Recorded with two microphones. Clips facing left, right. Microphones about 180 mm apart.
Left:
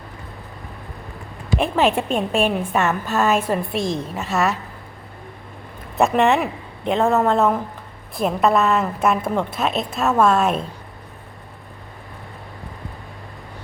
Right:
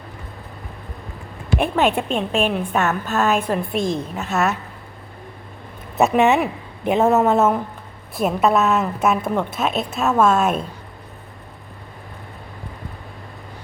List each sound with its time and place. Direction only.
1.7 s a woman's voice: centre (ahead or behind)
6.0 s a woman's voice: 5° right (ahead or behind)